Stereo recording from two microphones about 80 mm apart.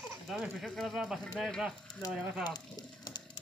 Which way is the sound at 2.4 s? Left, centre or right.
Left.